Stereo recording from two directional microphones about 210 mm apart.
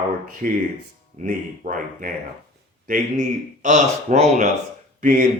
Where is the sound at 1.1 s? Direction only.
35° right (ahead or behind).